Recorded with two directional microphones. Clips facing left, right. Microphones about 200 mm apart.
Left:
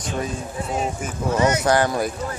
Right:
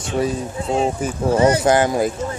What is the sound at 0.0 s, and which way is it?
Speech, 30° right (ahead or behind).